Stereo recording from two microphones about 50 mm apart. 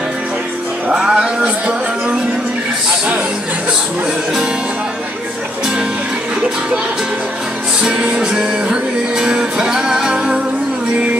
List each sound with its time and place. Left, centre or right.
0.9 s music: centre
7.8 s music: centre